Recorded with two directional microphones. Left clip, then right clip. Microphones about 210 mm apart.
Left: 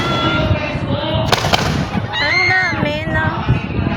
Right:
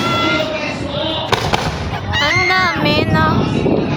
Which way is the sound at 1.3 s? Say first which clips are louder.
Left 1 dB; 45° left (ahead or behind).